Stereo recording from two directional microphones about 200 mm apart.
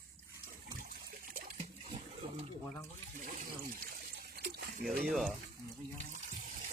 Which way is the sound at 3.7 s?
45° right (ahead or behind).